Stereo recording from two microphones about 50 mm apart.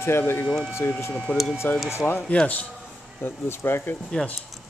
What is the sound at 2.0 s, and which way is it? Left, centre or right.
Speech, left.